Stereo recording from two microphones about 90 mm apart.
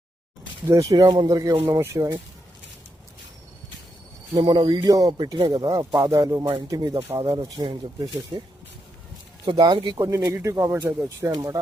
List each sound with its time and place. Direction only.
0.7 s speech: 40° right (ahead or behind); by 1.3 s 55° right (ahead or behind)
1.3 s speech: 40° right (ahead or behind)
1.6 s speech: 30° right (ahead or behind)
4.4 s speech: 60° right (ahead or behind)
5.1 s speech: 60° right (ahead or behind)
9.5 s speech: 65° right (ahead or behind)
10.0 s speech: 35° right (ahead or behind)
11.3 s speech: 45° right (ahead or behind)